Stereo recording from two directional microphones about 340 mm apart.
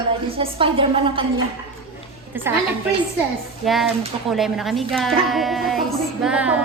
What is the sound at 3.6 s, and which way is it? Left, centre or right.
Child singing, centre.